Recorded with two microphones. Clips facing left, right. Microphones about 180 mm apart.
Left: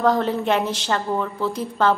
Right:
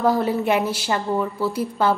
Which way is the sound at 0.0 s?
10° right (ahead or behind).